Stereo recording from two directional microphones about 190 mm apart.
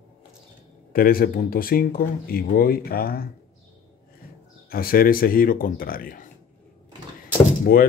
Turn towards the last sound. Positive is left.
turn(degrees=50)  # may be behind; listen again after turning